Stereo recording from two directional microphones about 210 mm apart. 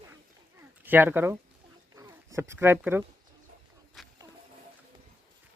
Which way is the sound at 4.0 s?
Centre (ahead or behind).